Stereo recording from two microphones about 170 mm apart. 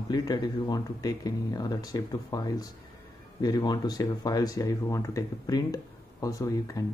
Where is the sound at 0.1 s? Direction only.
20° left (ahead or behind).